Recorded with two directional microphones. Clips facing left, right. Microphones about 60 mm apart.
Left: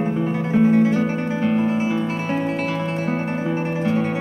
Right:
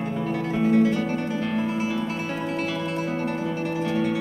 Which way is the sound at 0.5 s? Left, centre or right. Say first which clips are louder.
Left 4 dB; left.